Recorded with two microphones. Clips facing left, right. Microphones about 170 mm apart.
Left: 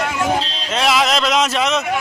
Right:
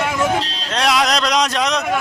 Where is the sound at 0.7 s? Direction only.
Centre (ahead or behind).